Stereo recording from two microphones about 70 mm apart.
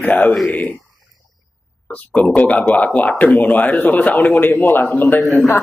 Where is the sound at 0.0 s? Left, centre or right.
Left.